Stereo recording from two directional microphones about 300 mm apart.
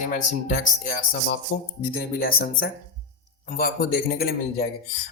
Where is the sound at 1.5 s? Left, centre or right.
Left.